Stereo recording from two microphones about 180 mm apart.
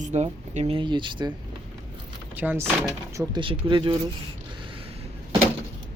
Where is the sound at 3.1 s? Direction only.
25° right (ahead or behind).